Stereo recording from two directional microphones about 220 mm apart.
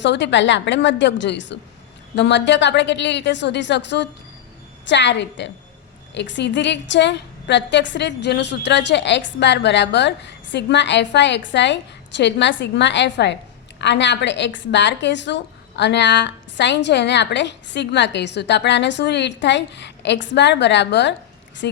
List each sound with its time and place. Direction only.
0.0 s a woman's voice: 55° left (ahead or behind)